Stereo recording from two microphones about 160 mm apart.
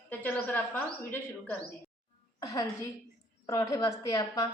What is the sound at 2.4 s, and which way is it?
A woman's voice, 20° left (ahead or behind).